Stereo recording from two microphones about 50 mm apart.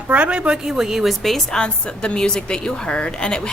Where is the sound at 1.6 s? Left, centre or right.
Left.